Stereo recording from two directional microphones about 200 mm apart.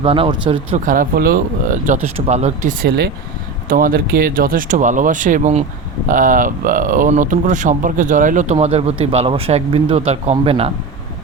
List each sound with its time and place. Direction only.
0.0 s speech: 25° right (ahead or behind)
0.9 s speech: 45° right (ahead or behind); by 10.7 s 30° right (ahead or behind)